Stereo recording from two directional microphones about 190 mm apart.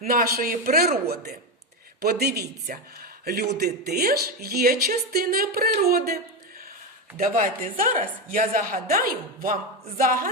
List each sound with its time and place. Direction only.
0.1 s a man's voice: 50° right (ahead or behind)
7.2 s speech: 45° right (ahead or behind)